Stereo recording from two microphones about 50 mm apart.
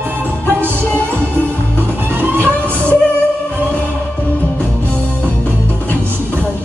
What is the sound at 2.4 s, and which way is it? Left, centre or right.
Music, left.